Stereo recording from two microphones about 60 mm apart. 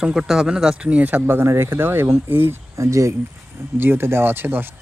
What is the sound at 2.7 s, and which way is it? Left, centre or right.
Speech, right.